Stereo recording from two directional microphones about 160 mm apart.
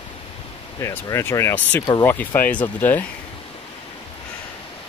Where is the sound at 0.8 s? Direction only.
20° left (ahead or behind).